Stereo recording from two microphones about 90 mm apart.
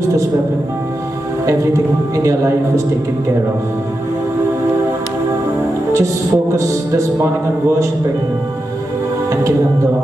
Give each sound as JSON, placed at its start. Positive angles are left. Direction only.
{"t": 1.4, "sound": "a man's voice", "side_deg": -35}
{"t": 5.9, "sound": "a man's voice", "side_deg": -35}